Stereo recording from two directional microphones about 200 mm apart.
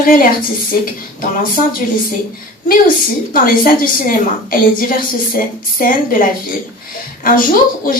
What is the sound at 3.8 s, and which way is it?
A woman's voice, 45° left (ahead or behind).